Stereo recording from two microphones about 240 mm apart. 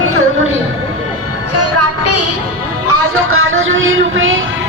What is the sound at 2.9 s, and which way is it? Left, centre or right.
Music, right.